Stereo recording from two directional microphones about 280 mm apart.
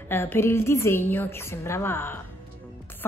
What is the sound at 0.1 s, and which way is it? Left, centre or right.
Speech, centre.